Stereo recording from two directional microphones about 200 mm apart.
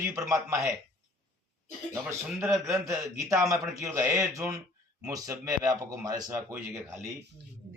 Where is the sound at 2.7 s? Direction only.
15° right (ahead or behind).